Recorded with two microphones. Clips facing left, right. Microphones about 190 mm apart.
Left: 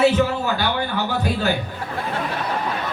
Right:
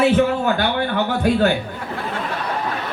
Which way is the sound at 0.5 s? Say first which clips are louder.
Right 3 dB; 55° right (ahead or behind).